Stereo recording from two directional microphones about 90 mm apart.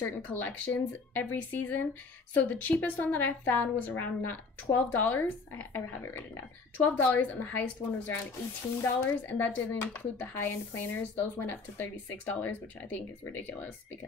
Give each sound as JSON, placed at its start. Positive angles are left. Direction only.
{"t": 0.0, "sound": "speech", "side_deg": 20}
{"t": 8.8, "sound": "speech", "side_deg": 20}